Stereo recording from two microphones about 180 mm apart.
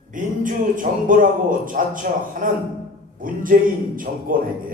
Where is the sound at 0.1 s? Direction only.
45° right (ahead or behind).